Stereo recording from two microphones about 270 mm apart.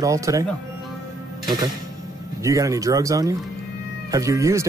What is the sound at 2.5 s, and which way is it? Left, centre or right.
Speech, centre.